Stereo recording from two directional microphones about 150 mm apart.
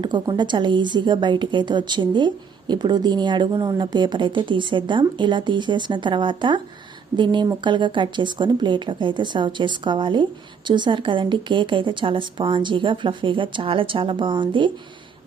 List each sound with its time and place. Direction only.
0.0 s a woman's voice: 30° right (ahead or behind)